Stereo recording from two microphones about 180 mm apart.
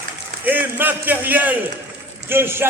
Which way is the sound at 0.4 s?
10° right (ahead or behind).